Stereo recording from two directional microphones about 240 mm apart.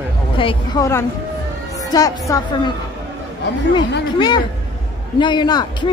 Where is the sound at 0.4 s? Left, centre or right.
Centre.